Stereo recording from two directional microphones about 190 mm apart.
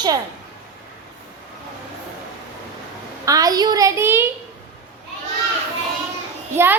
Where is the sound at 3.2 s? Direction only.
20° right (ahead or behind).